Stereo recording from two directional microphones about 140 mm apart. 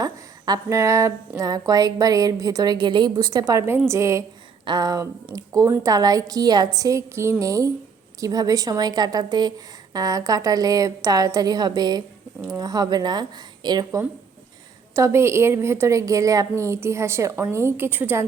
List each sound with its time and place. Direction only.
0.0 s a sound: 25° right (ahead or behind)
1.4 s a woman's voice: 25° right (ahead or behind)
14.9 s a woman's voice: 20° right (ahead or behind)